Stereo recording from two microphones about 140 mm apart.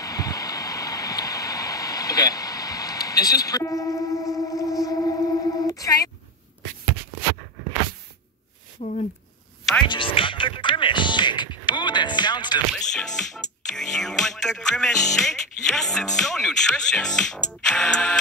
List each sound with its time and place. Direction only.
0.0 s a sound: 25° left (ahead or behind)
5.7 s telephone: 25° left (ahead or behind)
8.8 s speech: 50° left (ahead or behind)
9.8 s music: 40° left (ahead or behind)
12.7 s speech: 5° left (ahead or behind)